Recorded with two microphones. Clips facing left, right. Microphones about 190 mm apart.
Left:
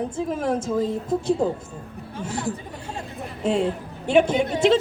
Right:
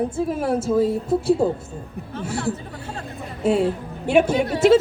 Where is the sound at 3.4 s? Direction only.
5° right (ahead or behind).